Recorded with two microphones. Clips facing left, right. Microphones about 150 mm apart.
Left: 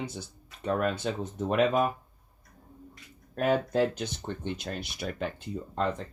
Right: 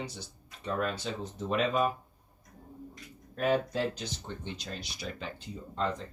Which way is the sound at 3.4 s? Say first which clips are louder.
Left 3 dB; 50° left (ahead or behind).